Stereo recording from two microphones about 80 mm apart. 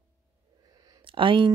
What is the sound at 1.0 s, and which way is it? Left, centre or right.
Speech, right.